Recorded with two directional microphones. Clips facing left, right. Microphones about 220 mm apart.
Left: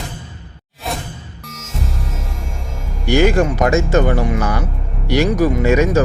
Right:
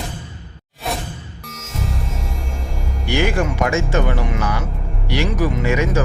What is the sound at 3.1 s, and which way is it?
Speech, 40° left (ahead or behind).